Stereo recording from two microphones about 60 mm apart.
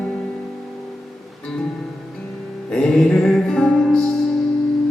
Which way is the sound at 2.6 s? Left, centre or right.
Centre.